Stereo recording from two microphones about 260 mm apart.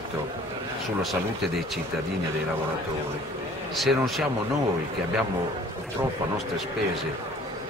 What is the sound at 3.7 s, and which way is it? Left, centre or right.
Speech, centre.